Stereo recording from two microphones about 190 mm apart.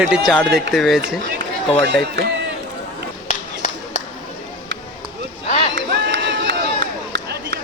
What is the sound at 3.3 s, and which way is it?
Clapping, 40° left (ahead or behind).